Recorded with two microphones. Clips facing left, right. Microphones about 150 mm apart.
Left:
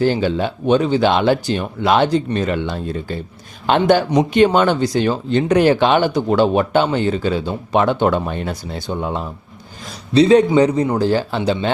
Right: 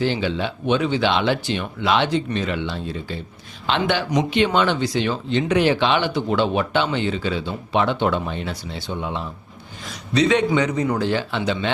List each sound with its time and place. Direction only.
0.0 s speech: 45° left (ahead or behind)
9.9 s a man's voice: 35° left (ahead or behind)